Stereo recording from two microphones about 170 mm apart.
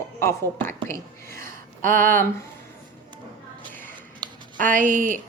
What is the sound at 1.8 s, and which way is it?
Speech, 55° right (ahead or behind).